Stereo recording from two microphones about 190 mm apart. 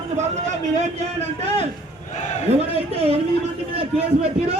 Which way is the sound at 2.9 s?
30° right (ahead or behind).